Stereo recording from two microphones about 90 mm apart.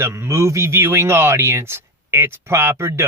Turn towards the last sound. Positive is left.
turn(degrees=-30)  # may be behind; listen again after turning